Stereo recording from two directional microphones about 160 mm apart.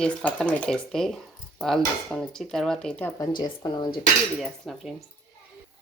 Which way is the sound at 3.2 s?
25° left (ahead or behind).